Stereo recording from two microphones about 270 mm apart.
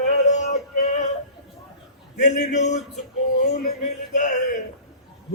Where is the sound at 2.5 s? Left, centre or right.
Left.